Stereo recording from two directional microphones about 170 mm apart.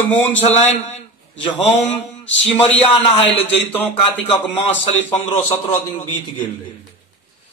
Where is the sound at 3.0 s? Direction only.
35° left (ahead or behind).